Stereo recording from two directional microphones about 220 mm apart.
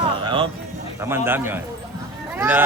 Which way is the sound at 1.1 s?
10° right (ahead or behind).